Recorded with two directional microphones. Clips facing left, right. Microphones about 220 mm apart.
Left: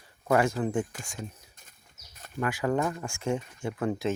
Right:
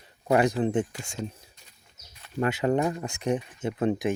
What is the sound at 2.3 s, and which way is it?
Speech, 25° right (ahead or behind).